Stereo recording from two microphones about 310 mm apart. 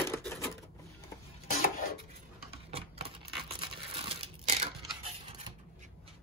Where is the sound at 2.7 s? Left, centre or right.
Centre.